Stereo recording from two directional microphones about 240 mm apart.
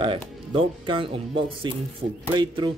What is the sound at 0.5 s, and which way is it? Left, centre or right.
Speech, right.